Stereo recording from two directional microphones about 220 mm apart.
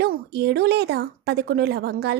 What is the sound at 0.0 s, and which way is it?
Speech, 50° right (ahead or behind).